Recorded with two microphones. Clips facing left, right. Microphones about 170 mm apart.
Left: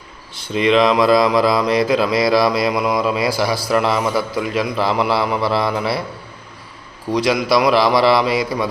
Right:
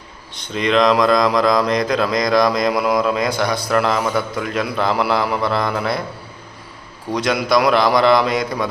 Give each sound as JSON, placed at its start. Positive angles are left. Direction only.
{"t": 0.3, "sound": "speech", "side_deg": 5}
{"t": 7.1, "sound": "speech", "side_deg": 0}